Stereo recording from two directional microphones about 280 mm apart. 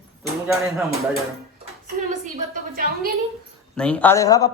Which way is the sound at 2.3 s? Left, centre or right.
Right.